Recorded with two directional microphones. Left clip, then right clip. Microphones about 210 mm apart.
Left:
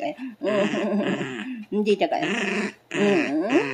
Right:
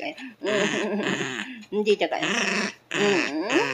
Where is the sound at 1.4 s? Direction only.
40° left (ahead or behind).